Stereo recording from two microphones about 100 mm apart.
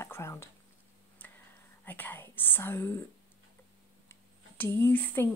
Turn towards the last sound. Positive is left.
turn(degrees=20)  # may be behind; listen again after turning